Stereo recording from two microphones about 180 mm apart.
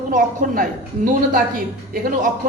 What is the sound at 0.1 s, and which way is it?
A man's voice, 50° right (ahead or behind).